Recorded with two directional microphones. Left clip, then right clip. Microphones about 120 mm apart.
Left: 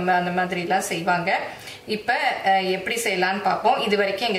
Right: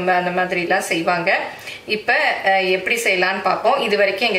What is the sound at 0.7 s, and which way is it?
Speech, 10° right (ahead or behind).